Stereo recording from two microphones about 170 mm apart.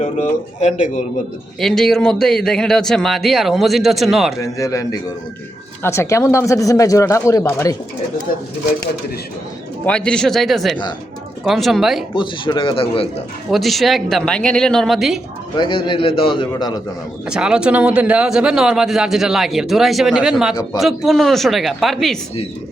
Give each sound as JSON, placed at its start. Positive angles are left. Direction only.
{"t": 0.0, "sound": "speech", "side_deg": 45}
{"t": 1.5, "sound": "speech", "side_deg": 0}
{"t": 4.4, "sound": "a man's voice", "side_deg": 20}
{"t": 8.3, "sound": "speech", "side_deg": 55}
{"t": 9.8, "sound": "speech", "side_deg": 5}
{"t": 12.1, "sound": "a man's voice", "side_deg": 30}
{"t": 13.5, "sound": "speech", "side_deg": 0}
{"t": 15.5, "sound": "a man's voice", "side_deg": 25}
{"t": 17.2, "sound": "speech", "side_deg": -5}